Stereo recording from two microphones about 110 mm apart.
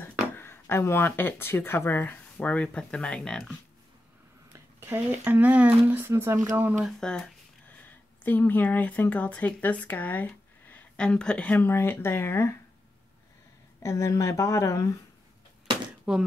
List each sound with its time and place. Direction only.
0.0 s speech: 20° left (ahead or behind)
4.5 s speech: 20° right (ahead or behind)
6.8 s speech: 5° left (ahead or behind)
7.8 s speech: 15° left (ahead or behind)
13.8 s speech: 30° left (ahead or behind)
16.1 s speech: 10° right (ahead or behind)